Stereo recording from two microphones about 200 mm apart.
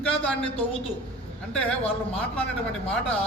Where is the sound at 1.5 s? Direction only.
5° left (ahead or behind).